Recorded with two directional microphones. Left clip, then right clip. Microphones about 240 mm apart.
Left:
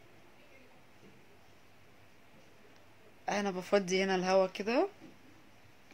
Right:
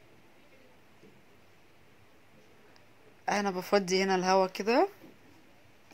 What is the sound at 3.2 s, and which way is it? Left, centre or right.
Speech, centre.